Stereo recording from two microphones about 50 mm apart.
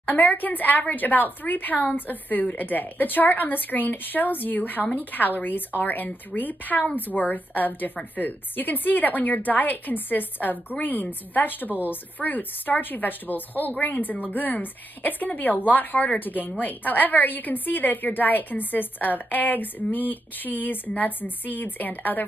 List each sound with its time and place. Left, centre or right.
0.0 s a woman's voice: left